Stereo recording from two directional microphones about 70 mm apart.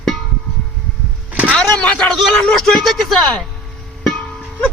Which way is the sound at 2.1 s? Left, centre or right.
Centre.